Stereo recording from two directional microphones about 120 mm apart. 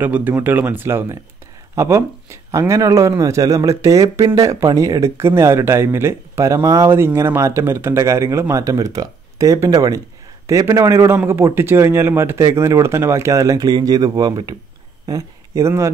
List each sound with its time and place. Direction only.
0.0 s speech: 15° right (ahead or behind)